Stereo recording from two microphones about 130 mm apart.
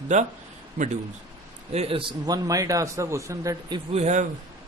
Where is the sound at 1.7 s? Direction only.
50° right (ahead or behind).